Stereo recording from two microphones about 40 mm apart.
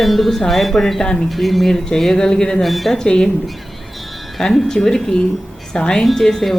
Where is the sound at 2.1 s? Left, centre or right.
Centre.